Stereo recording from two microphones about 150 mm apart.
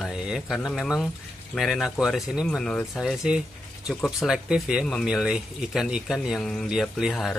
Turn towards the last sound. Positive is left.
turn(degrees=0)  # may be behind; listen again after turning